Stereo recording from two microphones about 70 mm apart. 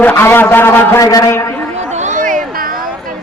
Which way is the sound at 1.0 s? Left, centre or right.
Left.